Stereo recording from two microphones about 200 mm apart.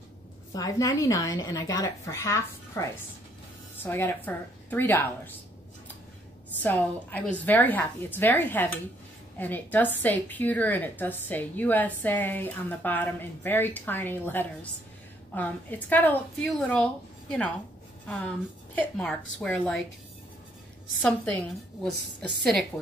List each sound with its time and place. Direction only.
0.5 s a woman's voice: 15° left (ahead or behind)
6.6 s a woman's voice: 10° left (ahead or behind)
21.8 s a woman's voice: centre (ahead or behind)